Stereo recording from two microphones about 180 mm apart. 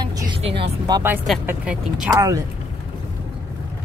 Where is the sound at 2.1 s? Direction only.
20° right (ahead or behind).